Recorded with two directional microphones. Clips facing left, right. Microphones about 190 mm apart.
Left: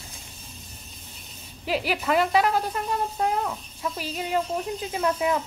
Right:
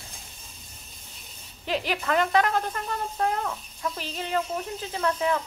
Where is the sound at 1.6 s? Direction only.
5° left (ahead or behind).